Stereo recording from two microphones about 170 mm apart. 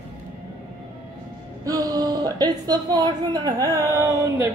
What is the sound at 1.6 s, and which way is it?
Speech, 20° right (ahead or behind).